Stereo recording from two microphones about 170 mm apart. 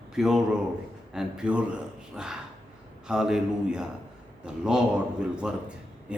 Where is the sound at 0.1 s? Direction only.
5° right (ahead or behind).